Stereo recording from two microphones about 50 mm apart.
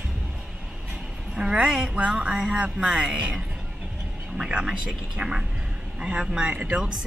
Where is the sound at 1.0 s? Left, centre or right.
Centre.